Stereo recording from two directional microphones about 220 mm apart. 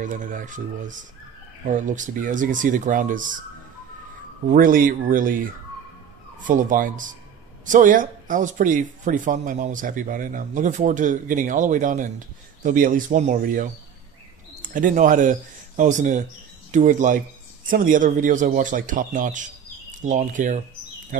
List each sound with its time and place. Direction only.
0.0 s speech: 35° right (ahead or behind)
4.5 s speech: 40° right (ahead or behind)